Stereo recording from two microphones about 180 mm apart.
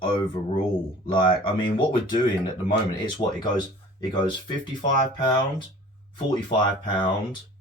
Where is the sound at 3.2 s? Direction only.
35° left (ahead or behind).